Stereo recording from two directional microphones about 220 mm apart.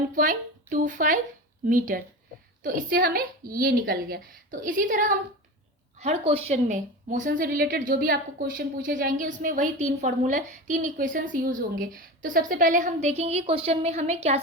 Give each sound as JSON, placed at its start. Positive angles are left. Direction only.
{"t": 0.2, "sound": "a woman's voice", "side_deg": -40}